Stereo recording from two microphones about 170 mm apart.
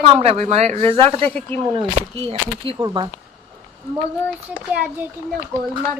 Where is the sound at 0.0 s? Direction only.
35° right (ahead or behind).